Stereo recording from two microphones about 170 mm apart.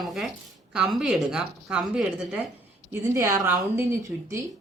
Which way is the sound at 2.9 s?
15° right (ahead or behind).